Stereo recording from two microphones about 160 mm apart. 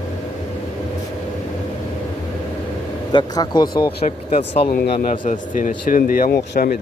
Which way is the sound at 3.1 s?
25° left (ahead or behind).